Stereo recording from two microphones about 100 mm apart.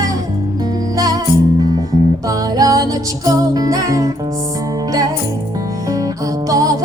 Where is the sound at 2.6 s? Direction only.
40° right (ahead or behind).